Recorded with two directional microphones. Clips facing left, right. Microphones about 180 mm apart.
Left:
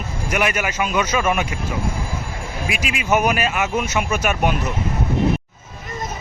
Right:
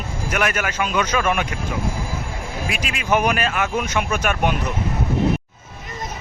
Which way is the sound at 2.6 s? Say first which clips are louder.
Left 2 dB; 5° left (ahead or behind).